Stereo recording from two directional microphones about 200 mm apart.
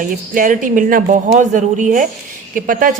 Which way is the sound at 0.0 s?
40° right (ahead or behind).